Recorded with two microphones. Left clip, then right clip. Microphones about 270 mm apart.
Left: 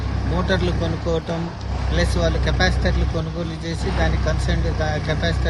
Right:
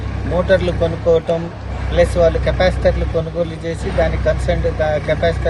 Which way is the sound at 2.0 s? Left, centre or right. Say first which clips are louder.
Right 10 dB; centre.